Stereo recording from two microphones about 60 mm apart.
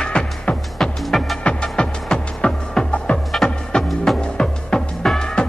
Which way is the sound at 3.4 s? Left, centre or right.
Centre.